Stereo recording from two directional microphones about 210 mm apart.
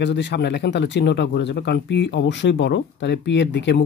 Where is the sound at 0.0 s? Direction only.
55° left (ahead or behind).